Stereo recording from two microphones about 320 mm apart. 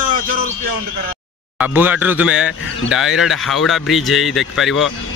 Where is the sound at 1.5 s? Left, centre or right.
Centre.